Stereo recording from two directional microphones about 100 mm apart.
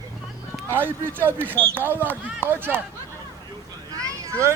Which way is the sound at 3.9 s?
35° right (ahead or behind).